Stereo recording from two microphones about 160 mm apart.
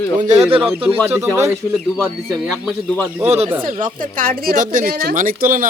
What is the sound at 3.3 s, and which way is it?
Speech, 40° right (ahead or behind).